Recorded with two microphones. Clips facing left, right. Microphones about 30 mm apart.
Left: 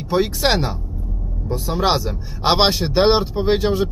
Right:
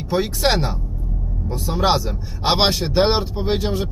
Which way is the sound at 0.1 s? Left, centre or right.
Centre.